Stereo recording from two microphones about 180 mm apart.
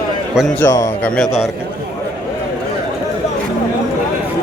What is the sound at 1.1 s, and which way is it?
Speech, centre (ahead or behind).